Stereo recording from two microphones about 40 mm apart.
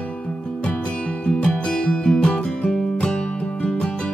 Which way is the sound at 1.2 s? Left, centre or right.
Left.